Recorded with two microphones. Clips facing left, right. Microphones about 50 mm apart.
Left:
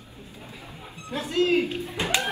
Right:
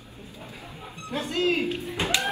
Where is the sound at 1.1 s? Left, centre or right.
Right.